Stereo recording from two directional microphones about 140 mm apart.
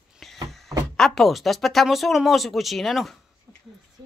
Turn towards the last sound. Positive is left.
turn(degrees=0)  # may be behind; listen again after turning